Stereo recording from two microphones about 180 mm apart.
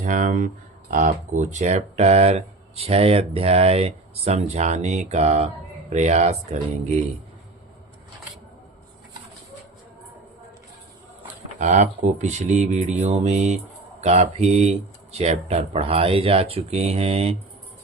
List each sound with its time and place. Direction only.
0.0 s speech: 45° right (ahead or behind)
11.6 s speech: 40° right (ahead or behind)